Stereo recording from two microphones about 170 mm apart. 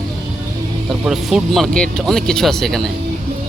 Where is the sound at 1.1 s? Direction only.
Centre (ahead or behind).